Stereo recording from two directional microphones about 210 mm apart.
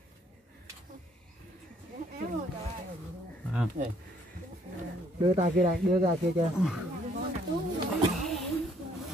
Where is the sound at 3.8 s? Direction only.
35° right (ahead or behind).